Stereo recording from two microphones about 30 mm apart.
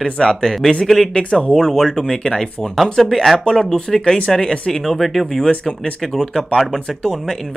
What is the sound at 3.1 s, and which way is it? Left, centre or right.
Speech, centre.